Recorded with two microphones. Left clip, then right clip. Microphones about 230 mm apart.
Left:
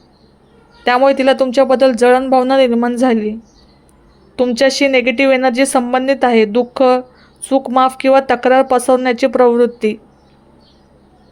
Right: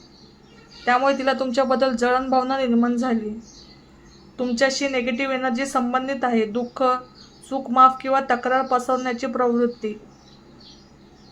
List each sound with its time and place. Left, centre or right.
0.9 s a woman's voice: left
4.4 s a woman's voice: left